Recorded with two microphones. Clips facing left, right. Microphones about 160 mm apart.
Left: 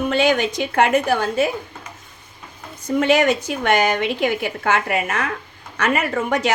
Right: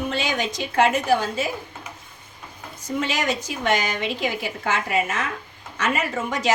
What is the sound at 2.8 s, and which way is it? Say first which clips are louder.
A woman's voice: left 8 dB; 60° left (ahead or behind).